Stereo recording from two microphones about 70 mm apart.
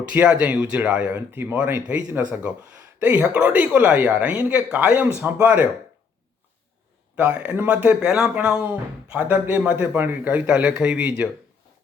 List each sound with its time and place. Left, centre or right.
0.1 s speech: centre
1.3 s speech: right
7.2 s speech: centre
8.0 s speech: centre